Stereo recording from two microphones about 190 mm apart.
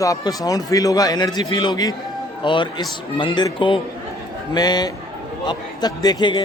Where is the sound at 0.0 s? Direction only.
20° left (ahead or behind).